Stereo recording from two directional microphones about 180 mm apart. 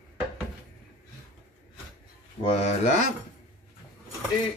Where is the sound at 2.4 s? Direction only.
40° left (ahead or behind).